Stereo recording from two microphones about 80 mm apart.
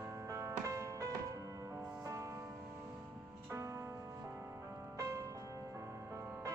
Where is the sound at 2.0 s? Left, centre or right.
Right.